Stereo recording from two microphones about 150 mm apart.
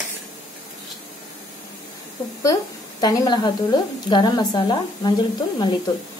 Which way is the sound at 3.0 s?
25° left (ahead or behind).